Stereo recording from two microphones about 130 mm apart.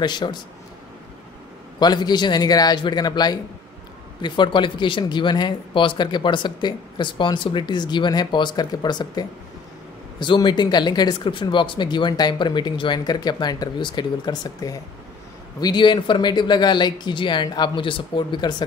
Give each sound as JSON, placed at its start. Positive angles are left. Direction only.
{"t": 0.0, "sound": "speech", "side_deg": 35}
{"t": 1.8, "sound": "speech", "side_deg": 35}